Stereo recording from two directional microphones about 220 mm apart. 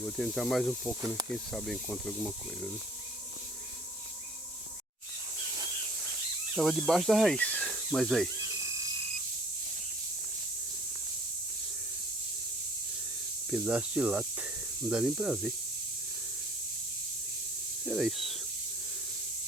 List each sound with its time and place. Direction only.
0.0 s speech: centre (ahead or behind)
6.6 s speech: centre (ahead or behind)
8.6 s frog: 15° right (ahead or behind)
13.5 s speech: 5° right (ahead or behind)
17.8 s speech: centre (ahead or behind)